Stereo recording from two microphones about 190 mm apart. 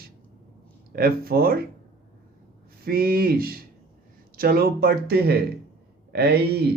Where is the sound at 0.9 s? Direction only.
55° right (ahead or behind).